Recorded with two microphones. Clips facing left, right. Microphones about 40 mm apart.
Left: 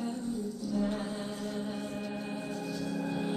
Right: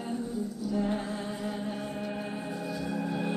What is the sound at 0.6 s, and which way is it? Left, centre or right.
Music, centre.